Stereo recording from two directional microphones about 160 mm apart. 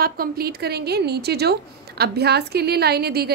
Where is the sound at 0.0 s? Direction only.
70° right (ahead or behind).